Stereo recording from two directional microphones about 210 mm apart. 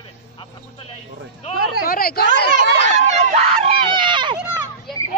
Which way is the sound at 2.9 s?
30° right (ahead or behind).